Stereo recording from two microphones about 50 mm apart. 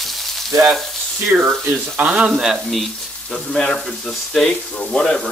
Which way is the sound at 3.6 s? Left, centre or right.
Centre.